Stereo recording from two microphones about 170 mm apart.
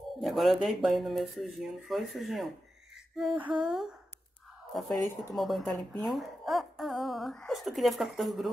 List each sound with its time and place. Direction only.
0.2 s speech: centre (ahead or behind)
4.8 s speech: 20° left (ahead or behind)
5.3 s speech: centre (ahead or behind)